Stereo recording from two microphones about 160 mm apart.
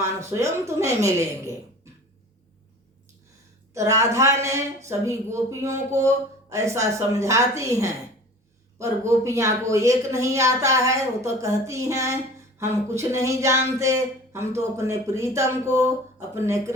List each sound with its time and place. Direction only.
0.0 s speech: 15° right (ahead or behind)
3.8 s speech: 20° right (ahead or behind)